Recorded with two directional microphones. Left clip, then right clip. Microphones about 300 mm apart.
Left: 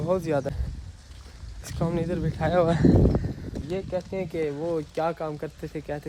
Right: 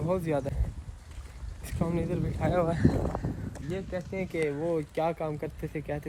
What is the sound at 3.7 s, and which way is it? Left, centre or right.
Speech, centre.